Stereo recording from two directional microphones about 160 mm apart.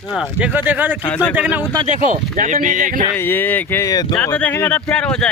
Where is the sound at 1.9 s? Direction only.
55° right (ahead or behind).